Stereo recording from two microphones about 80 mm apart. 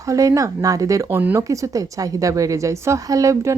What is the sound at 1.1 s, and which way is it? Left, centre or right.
Speech, right.